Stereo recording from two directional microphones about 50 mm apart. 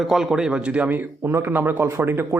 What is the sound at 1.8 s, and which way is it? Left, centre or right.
Speech, right.